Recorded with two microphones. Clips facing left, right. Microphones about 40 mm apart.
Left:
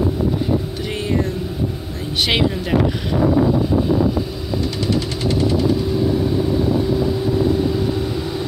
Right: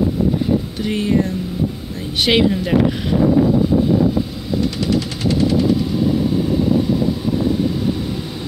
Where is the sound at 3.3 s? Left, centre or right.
Left.